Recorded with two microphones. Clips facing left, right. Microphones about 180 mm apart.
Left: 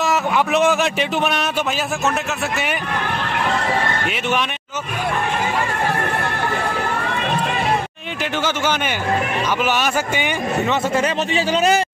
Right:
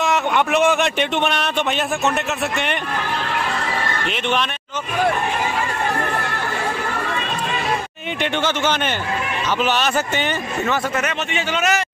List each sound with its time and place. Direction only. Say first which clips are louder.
0.0 s speech: even; centre (ahead or behind)
4.1 s a man's voice: right 3 dB; 10° left (ahead or behind)
8.2 s a man's voice: right 1 dB; 10° left (ahead or behind)
11.0 s a man's voice: left 4 dB; 35° left (ahead or behind)